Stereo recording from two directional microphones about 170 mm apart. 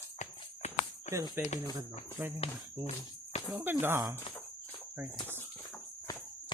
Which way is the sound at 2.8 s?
40° left (ahead or behind).